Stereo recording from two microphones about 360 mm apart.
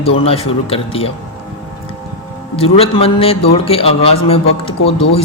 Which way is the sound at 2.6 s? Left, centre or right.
Centre.